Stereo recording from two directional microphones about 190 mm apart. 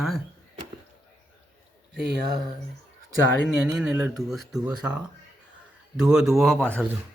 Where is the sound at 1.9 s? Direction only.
60° right (ahead or behind).